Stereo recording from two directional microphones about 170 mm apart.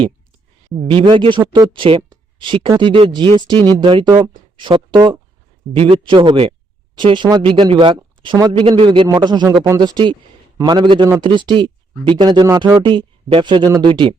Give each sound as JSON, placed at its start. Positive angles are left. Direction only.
{"t": 0.9, "sound": "speech", "side_deg": -30}